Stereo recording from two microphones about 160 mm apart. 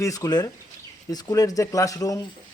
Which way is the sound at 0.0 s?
20° left (ahead or behind).